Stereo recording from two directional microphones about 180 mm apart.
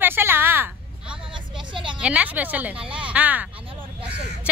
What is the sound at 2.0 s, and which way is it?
Speech, 10° right (ahead or behind).